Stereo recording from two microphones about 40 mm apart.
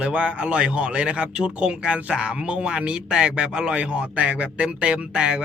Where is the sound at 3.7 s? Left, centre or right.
Right.